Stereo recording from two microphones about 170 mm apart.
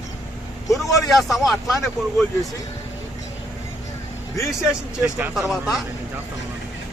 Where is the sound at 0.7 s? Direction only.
Centre (ahead or behind).